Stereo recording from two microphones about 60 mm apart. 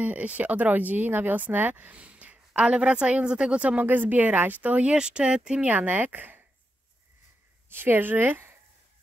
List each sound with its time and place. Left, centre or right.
0.0 s speech: right
3.8 s speech: right
4.9 s speech: centre; by 6.4 s right
7.7 s speech: right